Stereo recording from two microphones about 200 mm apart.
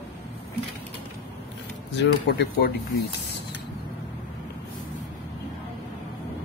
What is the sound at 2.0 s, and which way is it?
Speech, 55° left (ahead or behind).